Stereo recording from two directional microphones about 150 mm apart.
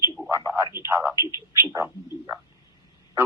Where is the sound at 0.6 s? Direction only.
30° left (ahead or behind).